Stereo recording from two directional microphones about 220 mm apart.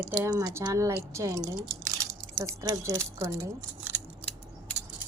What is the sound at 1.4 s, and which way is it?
Speech, centre (ahead or behind).